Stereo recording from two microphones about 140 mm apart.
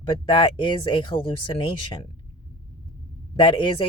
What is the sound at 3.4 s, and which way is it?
Speech, 35° left (ahead or behind).